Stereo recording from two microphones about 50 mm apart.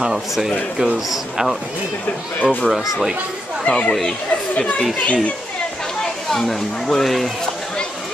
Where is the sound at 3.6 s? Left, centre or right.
Left.